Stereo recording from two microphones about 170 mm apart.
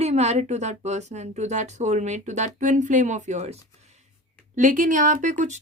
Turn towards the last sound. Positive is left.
turn(degrees=-45)  # may be behind; listen again after turning